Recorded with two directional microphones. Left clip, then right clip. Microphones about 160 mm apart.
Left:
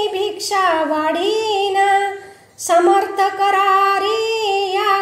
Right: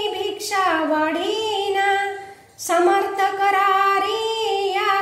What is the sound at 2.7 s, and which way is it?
Female singing, 45° left (ahead or behind).